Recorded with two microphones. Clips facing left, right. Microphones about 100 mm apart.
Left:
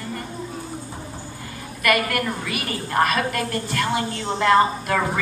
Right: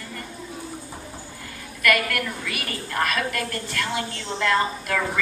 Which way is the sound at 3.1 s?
30° left (ahead or behind).